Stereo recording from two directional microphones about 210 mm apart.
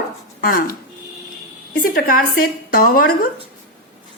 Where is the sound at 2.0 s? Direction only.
45° left (ahead or behind).